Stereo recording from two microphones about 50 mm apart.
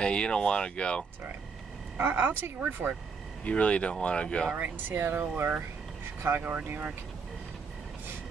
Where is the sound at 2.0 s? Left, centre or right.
Right.